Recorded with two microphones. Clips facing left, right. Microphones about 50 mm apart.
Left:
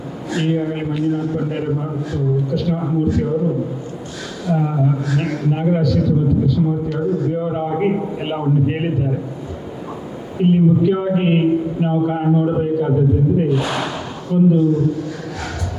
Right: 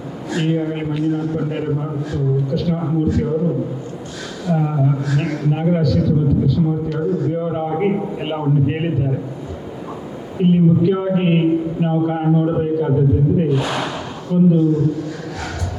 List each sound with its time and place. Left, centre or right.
0.3 s a man's voice: left
10.4 s a man's voice: left